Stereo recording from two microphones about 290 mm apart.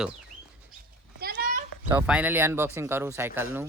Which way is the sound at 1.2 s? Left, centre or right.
Right.